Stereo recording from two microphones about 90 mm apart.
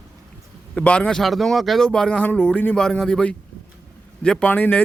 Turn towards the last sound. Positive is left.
turn(degrees=20)  # may be behind; listen again after turning